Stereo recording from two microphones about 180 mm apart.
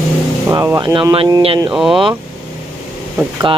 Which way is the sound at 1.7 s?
Centre (ahead or behind).